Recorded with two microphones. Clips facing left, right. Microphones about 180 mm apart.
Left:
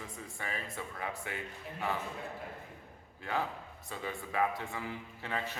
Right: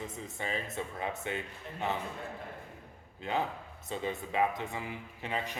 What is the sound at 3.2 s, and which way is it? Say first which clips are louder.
A man's voice: right 2 dB; 20° right (ahead or behind).